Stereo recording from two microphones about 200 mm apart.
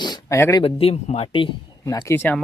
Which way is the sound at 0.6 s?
30° left (ahead or behind).